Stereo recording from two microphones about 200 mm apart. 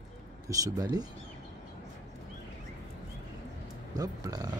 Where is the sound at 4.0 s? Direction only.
20° right (ahead or behind).